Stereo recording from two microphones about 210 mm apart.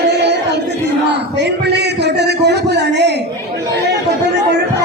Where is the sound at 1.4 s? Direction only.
55° right (ahead or behind).